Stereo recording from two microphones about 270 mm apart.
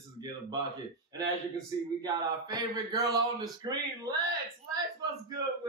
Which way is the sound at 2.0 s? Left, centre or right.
Centre.